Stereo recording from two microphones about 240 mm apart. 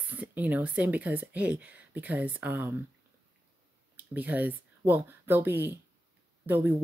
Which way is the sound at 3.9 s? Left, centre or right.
Centre.